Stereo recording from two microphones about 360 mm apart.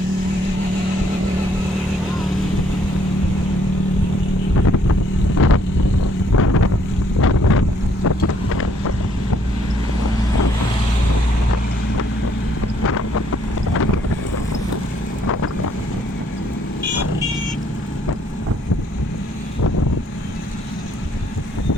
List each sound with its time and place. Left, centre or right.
5.4 s vehicle: left
6.3 s boat: left
7.2 s wind noise: left
8.0 s boat: left
12.8 s wind noise: left